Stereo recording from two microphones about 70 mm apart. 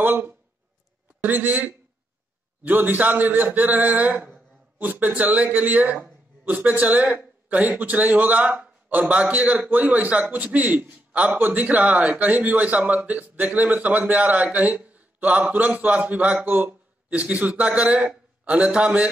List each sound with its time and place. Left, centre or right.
0.0 s a man's voice: right